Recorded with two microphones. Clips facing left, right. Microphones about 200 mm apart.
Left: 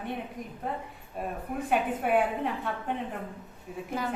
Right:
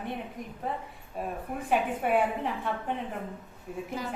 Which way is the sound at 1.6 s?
Centre (ahead or behind).